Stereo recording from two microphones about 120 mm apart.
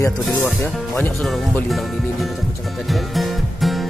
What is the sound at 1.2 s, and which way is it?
Speech, centre (ahead or behind).